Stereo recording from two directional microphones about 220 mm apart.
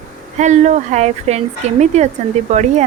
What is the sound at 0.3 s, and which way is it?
Speech, 30° right (ahead or behind).